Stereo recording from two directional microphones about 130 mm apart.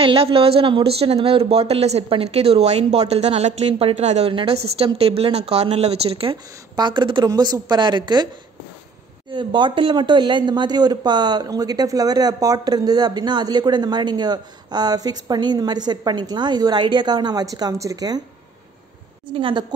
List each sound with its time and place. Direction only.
0.0 s speech: 45° right (ahead or behind)
4.3 s speech: 45° right (ahead or behind)
6.7 s speech: 35° right (ahead or behind)
9.3 s speech: 35° right (ahead or behind)
19.2 s speech: 40° right (ahead or behind)